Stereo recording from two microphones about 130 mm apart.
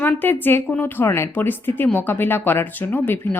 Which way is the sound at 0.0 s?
15° left (ahead or behind).